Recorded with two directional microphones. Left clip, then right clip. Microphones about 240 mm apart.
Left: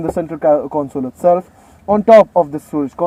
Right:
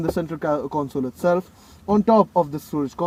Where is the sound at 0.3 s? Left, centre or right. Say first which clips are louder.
Left 11 dB; right.